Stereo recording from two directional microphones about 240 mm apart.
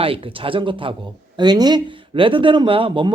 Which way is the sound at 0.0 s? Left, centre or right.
Right.